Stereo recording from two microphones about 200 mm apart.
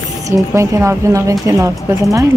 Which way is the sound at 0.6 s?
15° right (ahead or behind).